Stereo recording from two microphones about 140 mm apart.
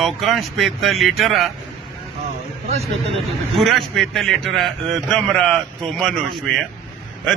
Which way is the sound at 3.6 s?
Centre (ahead or behind).